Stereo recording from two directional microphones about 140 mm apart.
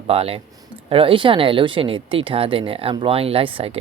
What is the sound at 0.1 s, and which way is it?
Speech, 45° right (ahead or behind).